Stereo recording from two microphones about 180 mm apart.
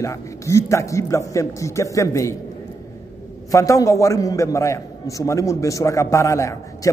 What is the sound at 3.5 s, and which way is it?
A man's voice, 20° left (ahead or behind).